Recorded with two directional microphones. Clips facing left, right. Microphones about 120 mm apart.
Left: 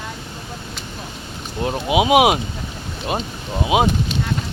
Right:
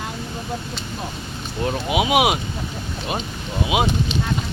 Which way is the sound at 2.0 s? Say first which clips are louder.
Left 5 dB; 35° left (ahead or behind).